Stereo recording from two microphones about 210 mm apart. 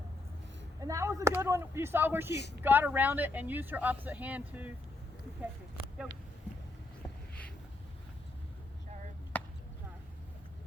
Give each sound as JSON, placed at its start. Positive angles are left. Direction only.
{"t": 0.8, "sound": "speech", "side_deg": -15}
{"t": 2.3, "sound": "speech", "side_deg": 55}
{"t": 2.6, "sound": "speech", "side_deg": -10}
{"t": 9.3, "sound": "chop", "side_deg": 10}